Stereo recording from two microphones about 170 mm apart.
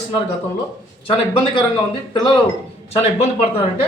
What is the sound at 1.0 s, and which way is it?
Speech, 30° left (ahead or behind).